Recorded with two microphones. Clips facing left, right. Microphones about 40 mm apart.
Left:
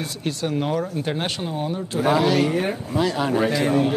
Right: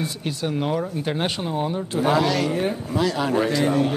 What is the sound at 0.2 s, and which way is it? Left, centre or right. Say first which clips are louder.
Speech: left 4 dB; centre.